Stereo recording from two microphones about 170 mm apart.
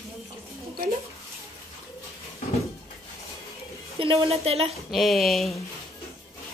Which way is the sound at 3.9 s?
35° right (ahead or behind).